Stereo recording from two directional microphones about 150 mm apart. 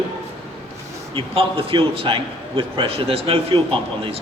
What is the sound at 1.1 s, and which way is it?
A man's voice, 40° right (ahead or behind).